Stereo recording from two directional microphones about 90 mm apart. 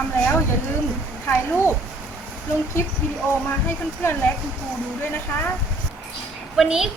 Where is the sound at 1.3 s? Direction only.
30° left (ahead or behind).